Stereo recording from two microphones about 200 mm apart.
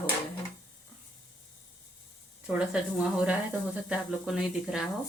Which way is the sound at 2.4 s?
5° right (ahead or behind).